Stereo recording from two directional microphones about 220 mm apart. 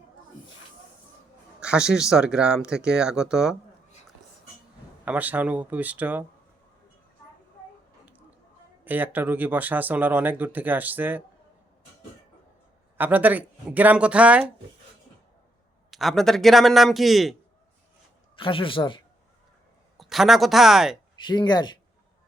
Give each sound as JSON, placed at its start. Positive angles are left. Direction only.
{"t": 1.6, "sound": "speech", "side_deg": -5}
{"t": 5.0, "sound": "speech", "side_deg": -5}
{"t": 8.8, "sound": "speech", "side_deg": -10}
{"t": 13.0, "sound": "speech", "side_deg": -5}
{"t": 15.9, "sound": "speech", "side_deg": 0}
{"t": 18.3, "sound": "speech", "side_deg": 25}
{"t": 20.0, "sound": "speech", "side_deg": 0}
{"t": 21.2, "sound": "speech", "side_deg": 20}